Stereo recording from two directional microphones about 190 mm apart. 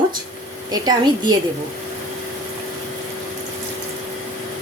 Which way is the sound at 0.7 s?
20° right (ahead or behind).